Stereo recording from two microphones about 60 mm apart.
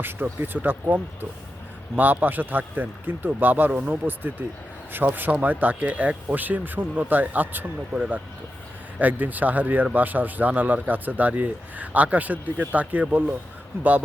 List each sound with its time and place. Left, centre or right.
0.0 s a man's voice: right
9.0 s speech: right
13.7 s a man's voice: right